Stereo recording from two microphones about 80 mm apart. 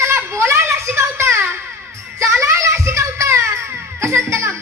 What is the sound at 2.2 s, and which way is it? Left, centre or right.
Music, right.